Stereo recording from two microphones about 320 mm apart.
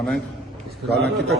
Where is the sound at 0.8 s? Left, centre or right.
Right.